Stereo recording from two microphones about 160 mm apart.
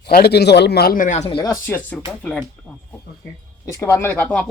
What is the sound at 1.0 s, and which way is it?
Speech, 45° left (ahead or behind).